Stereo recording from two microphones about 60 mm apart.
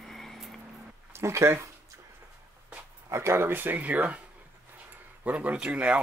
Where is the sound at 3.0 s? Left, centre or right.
Right.